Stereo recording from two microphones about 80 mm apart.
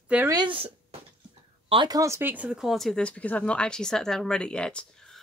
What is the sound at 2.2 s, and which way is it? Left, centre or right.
Speech, centre.